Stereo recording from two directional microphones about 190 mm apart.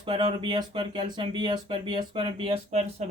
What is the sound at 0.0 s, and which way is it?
Speech, 25° right (ahead or behind).